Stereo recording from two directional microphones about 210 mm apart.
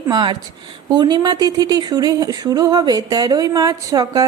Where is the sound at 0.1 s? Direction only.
20° right (ahead or behind).